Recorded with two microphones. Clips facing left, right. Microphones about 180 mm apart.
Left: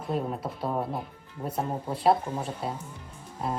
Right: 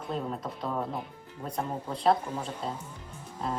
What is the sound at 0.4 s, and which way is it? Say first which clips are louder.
Speech: left 3 dB; 30° left (ahead or behind).